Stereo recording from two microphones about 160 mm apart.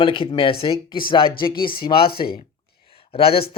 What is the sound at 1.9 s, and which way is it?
Speech, 70° left (ahead or behind).